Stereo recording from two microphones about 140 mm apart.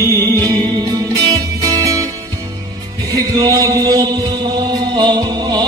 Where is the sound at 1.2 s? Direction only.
25° right (ahead or behind).